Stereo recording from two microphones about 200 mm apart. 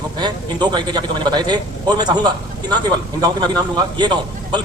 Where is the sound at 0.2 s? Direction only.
20° right (ahead or behind).